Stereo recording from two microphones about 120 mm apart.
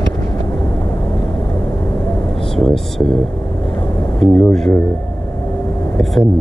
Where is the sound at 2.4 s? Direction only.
5° left (ahead or behind).